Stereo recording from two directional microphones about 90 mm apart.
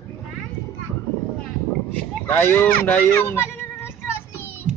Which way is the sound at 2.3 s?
20° left (ahead or behind).